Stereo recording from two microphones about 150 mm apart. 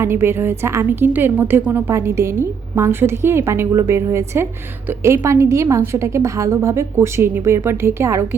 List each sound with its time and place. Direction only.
0.0 s a woman's voice: 15° right (ahead or behind)